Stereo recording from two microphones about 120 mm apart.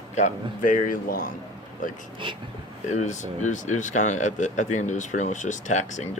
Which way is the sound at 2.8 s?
80° left.